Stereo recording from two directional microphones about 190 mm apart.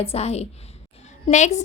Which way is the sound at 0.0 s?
35° left (ahead or behind).